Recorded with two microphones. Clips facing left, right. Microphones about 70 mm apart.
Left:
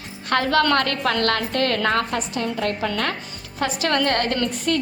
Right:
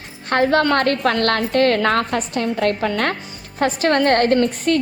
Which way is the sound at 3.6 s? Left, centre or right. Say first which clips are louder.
Right 5 dB; right.